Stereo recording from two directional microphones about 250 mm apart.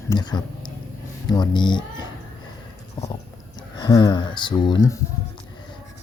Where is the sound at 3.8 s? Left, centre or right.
Centre.